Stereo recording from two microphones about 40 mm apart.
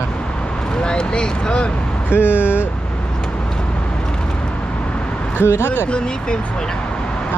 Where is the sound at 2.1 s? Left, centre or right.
Left.